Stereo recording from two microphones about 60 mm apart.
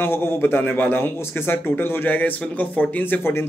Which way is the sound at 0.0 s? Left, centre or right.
Left.